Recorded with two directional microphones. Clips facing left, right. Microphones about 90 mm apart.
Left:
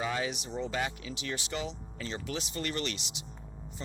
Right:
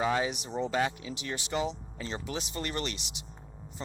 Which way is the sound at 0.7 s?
35° right (ahead or behind).